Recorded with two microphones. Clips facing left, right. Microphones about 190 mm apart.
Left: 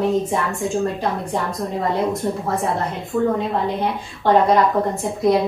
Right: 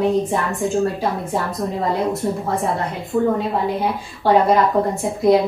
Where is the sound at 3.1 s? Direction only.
20° right (ahead or behind).